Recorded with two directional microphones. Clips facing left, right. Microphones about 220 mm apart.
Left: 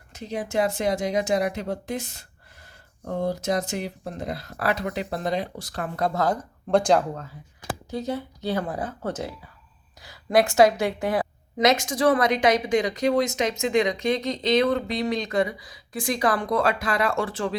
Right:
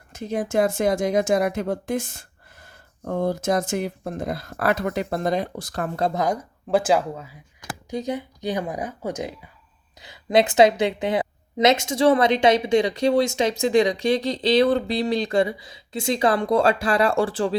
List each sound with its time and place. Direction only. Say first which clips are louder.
0.1 s speech: right 4 dB; 50° right (ahead or behind)
6.0 s a woman's voice: even; 15° right (ahead or behind); by 17.6 s 30° right (ahead or behind)